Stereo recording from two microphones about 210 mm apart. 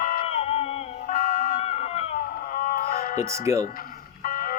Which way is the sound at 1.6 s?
30° left (ahead or behind).